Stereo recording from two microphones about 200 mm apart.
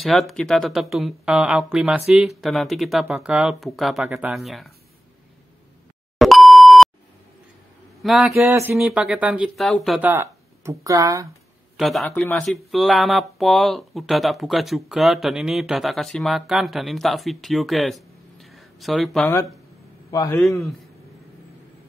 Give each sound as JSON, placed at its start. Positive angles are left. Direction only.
{"t": 0.0, "sound": "speech", "side_deg": 0}
{"t": 6.1, "sound": "beep", "side_deg": 0}
{"t": 8.0, "sound": "speech", "side_deg": 0}
{"t": 11.7, "sound": "a man's voice", "side_deg": 0}
{"t": 20.1, "sound": "a man's voice", "side_deg": 15}